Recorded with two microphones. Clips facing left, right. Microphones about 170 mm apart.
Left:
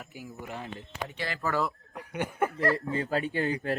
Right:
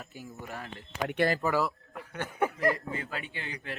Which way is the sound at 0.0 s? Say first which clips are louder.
Left 1 dB; 10° left (ahead or behind).